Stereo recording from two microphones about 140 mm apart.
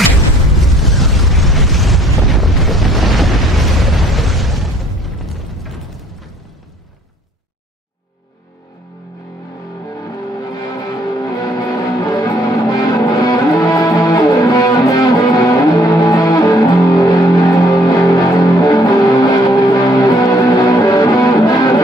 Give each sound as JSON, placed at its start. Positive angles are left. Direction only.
{"t": 0.6, "sound": "explosion", "side_deg": 0}
{"t": 10.7, "sound": "music", "side_deg": 30}